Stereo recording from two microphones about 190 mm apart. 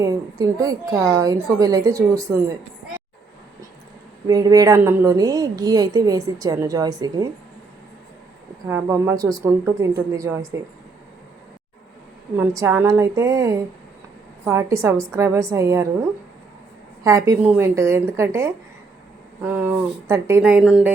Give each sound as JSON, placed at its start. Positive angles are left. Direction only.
{"t": 0.0, "sound": "a woman's voice", "side_deg": -20}
{"t": 4.3, "sound": "a woman's voice", "side_deg": -20}
{"t": 8.6, "sound": "a woman's voice", "side_deg": -15}
{"t": 12.4, "sound": "a woman's voice", "side_deg": -15}
{"t": 17.0, "sound": "a woman's voice", "side_deg": -15}